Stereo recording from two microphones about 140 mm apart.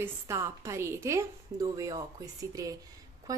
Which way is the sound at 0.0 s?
20° right (ahead or behind).